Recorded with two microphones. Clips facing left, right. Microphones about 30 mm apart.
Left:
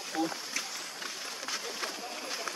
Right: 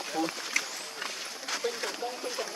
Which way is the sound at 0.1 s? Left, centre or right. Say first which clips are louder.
Right 2 dB; right.